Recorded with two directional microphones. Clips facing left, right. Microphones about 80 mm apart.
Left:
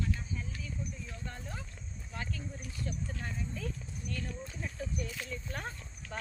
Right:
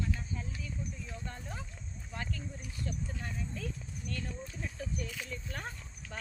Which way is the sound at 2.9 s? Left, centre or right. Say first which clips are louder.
Even; centre.